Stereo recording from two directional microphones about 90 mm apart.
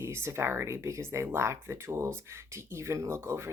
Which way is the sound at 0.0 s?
30° right (ahead or behind).